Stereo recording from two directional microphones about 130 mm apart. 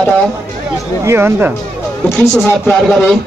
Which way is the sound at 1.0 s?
15° right (ahead or behind).